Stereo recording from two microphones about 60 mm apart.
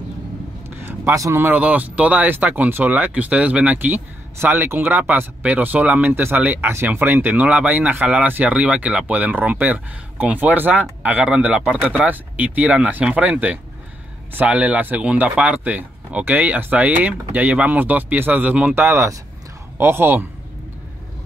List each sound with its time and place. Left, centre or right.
0.7 s a sound: right
1.5 s speech: right
5.4 s speech: right
8.5 s speech: right
12.1 s speech: right
18.9 s speech: right